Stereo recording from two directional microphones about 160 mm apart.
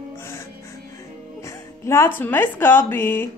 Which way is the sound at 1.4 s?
15° left (ahead or behind).